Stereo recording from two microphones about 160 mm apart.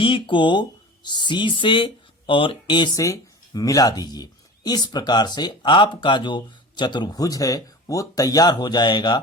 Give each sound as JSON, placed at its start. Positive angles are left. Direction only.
{"t": 0.0, "sound": "speech", "side_deg": 30}